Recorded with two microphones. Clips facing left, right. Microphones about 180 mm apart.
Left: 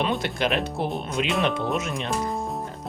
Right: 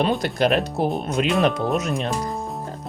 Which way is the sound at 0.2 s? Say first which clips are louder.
Right 5 dB; 40° right (ahead or behind).